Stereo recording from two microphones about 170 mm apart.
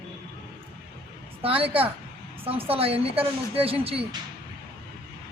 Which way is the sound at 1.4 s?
35° right (ahead or behind).